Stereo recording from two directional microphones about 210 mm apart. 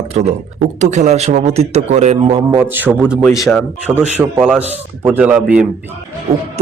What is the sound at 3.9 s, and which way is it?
A man's voice, 10° right (ahead or behind).